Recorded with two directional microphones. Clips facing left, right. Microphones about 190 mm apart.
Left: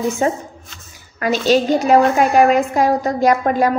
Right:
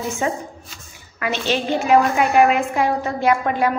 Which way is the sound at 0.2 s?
40° left (ahead or behind).